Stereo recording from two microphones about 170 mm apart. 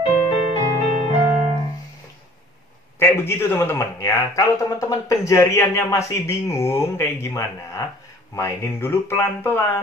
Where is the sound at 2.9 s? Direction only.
15° left (ahead or behind).